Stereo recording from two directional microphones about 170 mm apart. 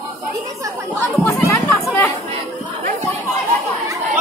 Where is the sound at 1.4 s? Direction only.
15° left (ahead or behind).